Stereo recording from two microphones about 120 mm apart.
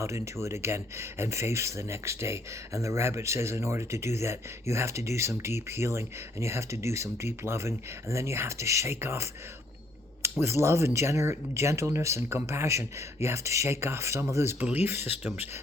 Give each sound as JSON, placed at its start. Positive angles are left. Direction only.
{"t": 0.0, "sound": "speech", "side_deg": -25}